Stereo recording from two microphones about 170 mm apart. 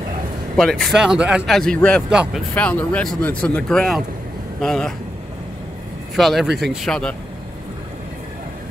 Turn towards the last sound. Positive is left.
turn(degrees=5)  # may be behind; listen again after turning